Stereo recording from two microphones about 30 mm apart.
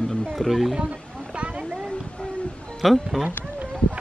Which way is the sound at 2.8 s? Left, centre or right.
Centre.